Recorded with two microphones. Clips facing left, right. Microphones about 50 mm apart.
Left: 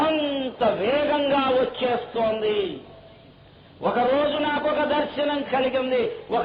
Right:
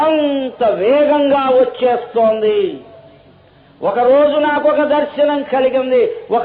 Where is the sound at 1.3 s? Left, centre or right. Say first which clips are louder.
Right 8 dB; right.